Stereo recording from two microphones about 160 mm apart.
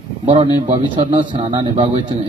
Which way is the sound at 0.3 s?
35° right (ahead or behind).